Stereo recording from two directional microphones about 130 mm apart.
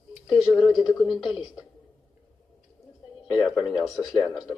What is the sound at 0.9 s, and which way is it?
Speech, centre (ahead or behind).